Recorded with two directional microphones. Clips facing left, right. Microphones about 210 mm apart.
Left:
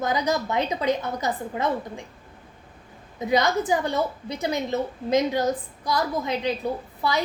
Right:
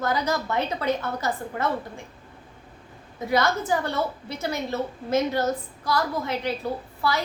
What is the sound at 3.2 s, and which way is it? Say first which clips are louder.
A woman's voice: left 2 dB; 15° left (ahead or behind).